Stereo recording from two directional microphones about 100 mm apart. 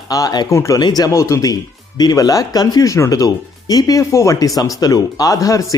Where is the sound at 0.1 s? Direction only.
40° left (ahead or behind).